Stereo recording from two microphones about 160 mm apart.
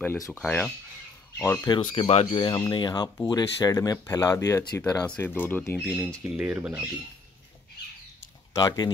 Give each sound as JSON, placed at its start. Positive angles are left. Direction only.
{"t": 0.0, "sound": "speech", "side_deg": 15}
{"t": 1.7, "sound": "speech", "side_deg": 35}
{"t": 2.5, "sound": "speech", "side_deg": 25}
{"t": 5.0, "sound": "speech", "side_deg": 10}
{"t": 6.3, "sound": "speech", "side_deg": -5}
{"t": 8.5, "sound": "speech", "side_deg": 25}